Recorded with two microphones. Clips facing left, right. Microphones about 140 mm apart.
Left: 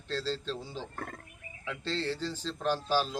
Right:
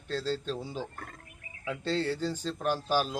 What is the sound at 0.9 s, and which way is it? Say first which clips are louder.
Speech: left 5 dB; 50° left (ahead or behind).